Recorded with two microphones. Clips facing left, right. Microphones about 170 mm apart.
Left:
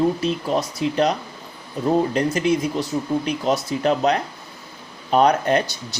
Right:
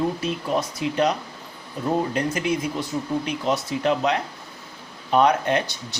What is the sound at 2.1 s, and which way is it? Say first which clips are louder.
Speech: left 4 dB; 35° left (ahead or behind).